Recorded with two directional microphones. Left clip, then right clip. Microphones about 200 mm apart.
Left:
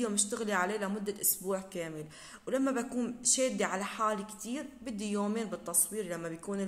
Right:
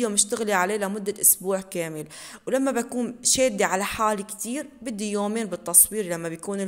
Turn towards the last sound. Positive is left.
turn(degrees=-45)  # may be behind; listen again after turning